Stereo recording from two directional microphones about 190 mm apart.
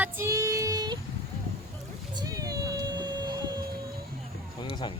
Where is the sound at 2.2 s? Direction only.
20° right (ahead or behind).